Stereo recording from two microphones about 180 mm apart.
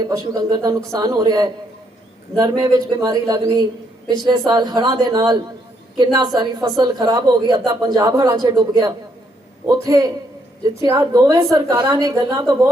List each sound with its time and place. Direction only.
0.1 s a woman's voice: 20° right (ahead or behind)